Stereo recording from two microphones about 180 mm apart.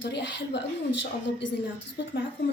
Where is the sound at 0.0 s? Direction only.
75° left (ahead or behind).